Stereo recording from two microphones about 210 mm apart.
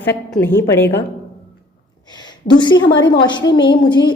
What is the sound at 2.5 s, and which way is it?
A woman's voice, 20° left (ahead or behind).